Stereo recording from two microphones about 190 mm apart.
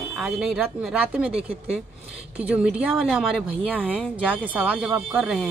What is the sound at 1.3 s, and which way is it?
Speech, 30° right (ahead or behind).